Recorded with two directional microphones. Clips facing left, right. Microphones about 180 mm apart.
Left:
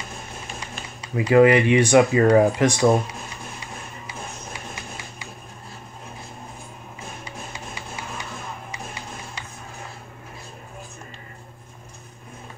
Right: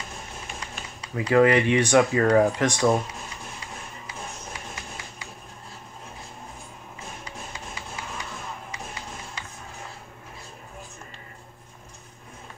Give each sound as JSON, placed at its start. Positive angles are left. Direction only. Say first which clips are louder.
{"t": 0.6, "sound": "speech", "louder": "left 2 dB", "side_deg": 10}